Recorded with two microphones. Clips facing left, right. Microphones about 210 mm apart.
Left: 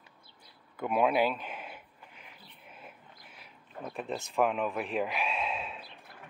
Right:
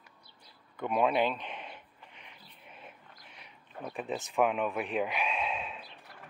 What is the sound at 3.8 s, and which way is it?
Speech, centre (ahead or behind).